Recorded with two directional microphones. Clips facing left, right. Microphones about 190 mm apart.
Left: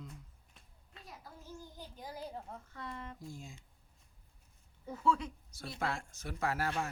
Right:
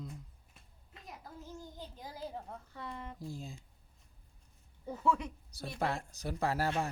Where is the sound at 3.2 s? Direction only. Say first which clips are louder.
Right 4 dB; 35° right (ahead or behind).